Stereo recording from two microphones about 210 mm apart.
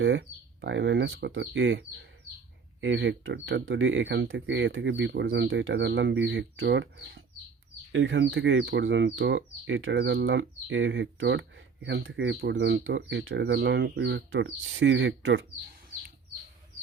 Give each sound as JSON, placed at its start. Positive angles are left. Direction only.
{"t": 0.0, "sound": "speech", "side_deg": -60}
{"t": 2.8, "sound": "speech", "side_deg": -60}